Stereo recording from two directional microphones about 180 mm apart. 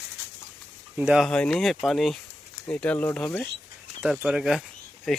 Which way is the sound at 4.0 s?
5° right (ahead or behind).